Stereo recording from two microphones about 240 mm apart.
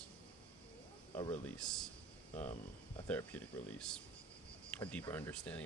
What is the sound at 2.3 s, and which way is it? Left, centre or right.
Speech, left.